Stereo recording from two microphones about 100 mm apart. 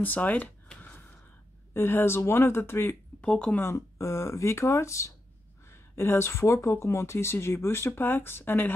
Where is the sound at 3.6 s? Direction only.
30° left (ahead or behind).